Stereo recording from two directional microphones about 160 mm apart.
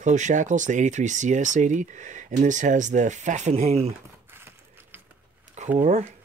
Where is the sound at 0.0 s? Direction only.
50° right (ahead or behind).